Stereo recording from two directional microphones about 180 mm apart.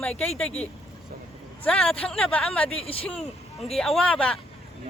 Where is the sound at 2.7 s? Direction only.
30° left (ahead or behind).